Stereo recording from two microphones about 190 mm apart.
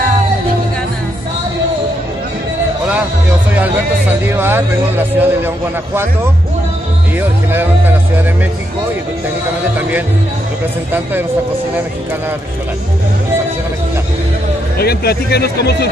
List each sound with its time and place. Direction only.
4.4 s speech: 10° right (ahead or behind)
14.8 s speech: 55° left (ahead or behind)